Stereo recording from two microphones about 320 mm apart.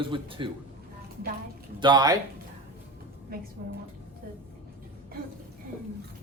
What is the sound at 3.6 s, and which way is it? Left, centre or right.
Speech, right.